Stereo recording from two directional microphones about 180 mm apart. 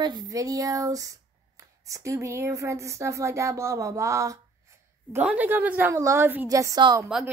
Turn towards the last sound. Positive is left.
turn(degrees=-20)  # may be behind; listen again after turning